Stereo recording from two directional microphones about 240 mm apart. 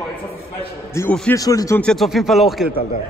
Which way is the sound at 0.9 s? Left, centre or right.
Centre.